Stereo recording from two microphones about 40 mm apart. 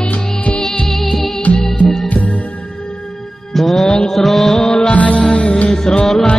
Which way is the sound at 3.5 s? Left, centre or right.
Centre.